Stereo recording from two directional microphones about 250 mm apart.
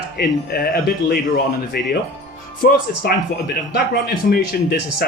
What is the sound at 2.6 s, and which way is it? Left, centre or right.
Speech, left.